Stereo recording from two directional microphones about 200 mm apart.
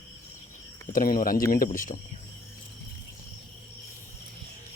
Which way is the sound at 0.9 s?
45° left (ahead or behind).